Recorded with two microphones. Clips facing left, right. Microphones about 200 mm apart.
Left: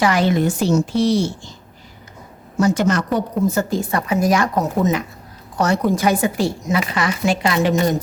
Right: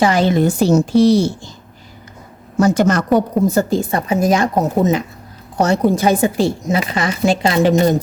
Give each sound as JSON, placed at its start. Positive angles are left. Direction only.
{"t": 0.0, "sound": "a woman's voice", "side_deg": -25}
{"t": 2.6, "sound": "a woman's voice", "side_deg": -45}
{"t": 3.5, "sound": "a woman's voice", "side_deg": -30}